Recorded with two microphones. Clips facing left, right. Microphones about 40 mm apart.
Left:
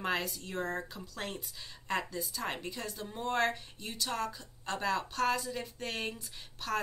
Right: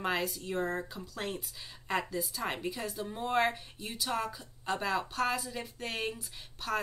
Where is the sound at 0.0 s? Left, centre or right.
Centre.